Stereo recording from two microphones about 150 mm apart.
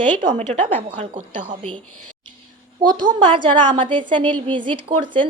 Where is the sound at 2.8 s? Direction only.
30° right (ahead or behind).